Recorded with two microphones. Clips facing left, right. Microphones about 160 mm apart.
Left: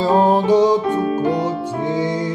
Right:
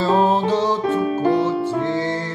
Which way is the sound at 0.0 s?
15° left (ahead or behind).